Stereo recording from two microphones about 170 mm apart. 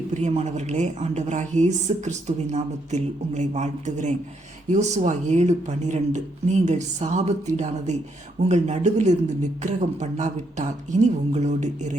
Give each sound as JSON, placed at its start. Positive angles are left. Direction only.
{"t": 0.1, "sound": "a woman's voice", "side_deg": -40}